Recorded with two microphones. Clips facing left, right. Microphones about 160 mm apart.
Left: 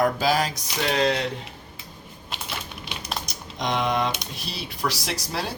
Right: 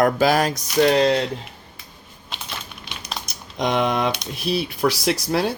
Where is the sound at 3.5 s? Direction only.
65° right (ahead or behind).